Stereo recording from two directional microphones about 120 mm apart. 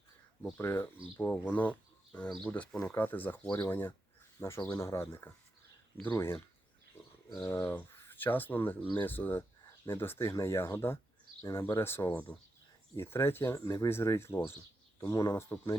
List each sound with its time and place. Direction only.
0.5 s speech: 20° left (ahead or behind)